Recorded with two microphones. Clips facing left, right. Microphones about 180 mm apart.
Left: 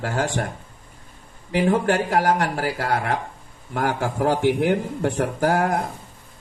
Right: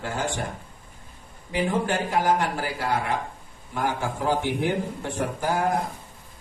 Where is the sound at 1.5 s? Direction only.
65° left (ahead or behind).